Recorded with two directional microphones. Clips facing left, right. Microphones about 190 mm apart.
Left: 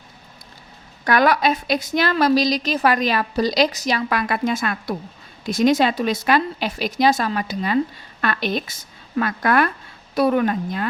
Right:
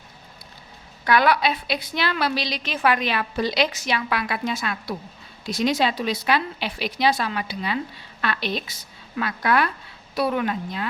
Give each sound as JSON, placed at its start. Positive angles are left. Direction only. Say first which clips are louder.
{"t": 1.0, "sound": "speech", "louder": "left 2 dB", "side_deg": 45}